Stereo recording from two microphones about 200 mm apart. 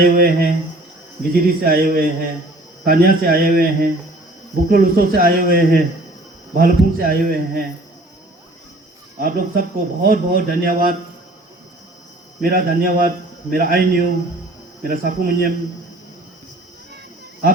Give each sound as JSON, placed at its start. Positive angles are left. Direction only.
{"t": 0.0, "sound": "speech", "side_deg": -45}
{"t": 9.2, "sound": "speech", "side_deg": -45}
{"t": 12.4, "sound": "speech", "side_deg": -45}